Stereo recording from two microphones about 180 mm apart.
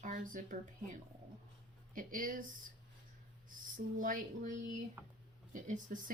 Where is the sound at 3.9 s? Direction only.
45° right (ahead or behind).